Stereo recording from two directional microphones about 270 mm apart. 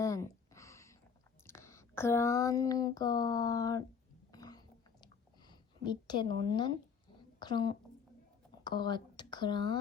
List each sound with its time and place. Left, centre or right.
0.0 s a sound: centre
4.3 s chewing: centre
5.5 s a woman's voice: centre